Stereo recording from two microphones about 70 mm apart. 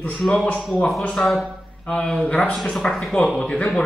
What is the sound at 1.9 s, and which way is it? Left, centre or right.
Speech, centre.